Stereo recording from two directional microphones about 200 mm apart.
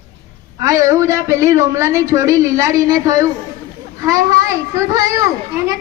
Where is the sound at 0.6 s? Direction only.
15° right (ahead or behind).